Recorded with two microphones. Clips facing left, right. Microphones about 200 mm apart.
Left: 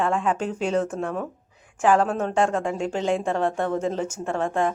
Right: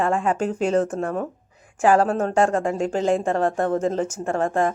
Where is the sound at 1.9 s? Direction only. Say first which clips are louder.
Right 2 dB; 40° right (ahead or behind).